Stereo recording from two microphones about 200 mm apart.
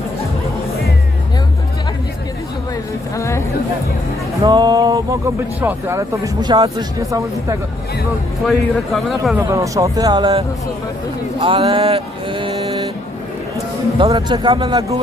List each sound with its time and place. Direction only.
3.2 s chatter: 15° left (ahead or behind)
4.4 s speech: 20° right (ahead or behind)
8.4 s speech: centre (ahead or behind)
9.4 s speech: 15° right (ahead or behind)
14.0 s speech: 25° right (ahead or behind)